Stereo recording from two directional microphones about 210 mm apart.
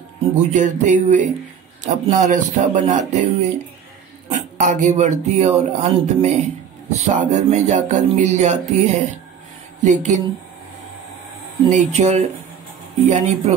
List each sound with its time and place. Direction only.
0.4 s speech: 35° right (ahead or behind)
4.3 s speech: 35° right (ahead or behind)
11.7 s speech: 35° right (ahead or behind)